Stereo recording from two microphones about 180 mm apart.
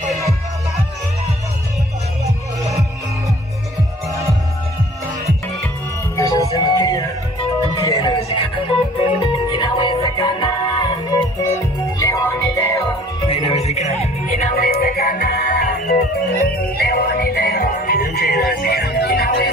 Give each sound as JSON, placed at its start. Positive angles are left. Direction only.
{"t": 6.1, "sound": "music", "side_deg": 20}
{"t": 11.4, "sound": "music", "side_deg": 15}
{"t": 13.3, "sound": "music", "side_deg": 35}
{"t": 14.5, "sound": "music", "side_deg": 55}